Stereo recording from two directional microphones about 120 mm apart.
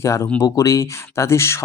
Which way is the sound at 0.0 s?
25° left (ahead or behind).